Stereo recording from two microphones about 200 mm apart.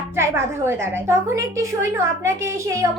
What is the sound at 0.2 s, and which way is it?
A woman's voice, 15° right (ahead or behind).